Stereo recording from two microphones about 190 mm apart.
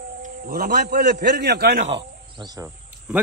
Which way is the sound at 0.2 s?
50° right (ahead or behind).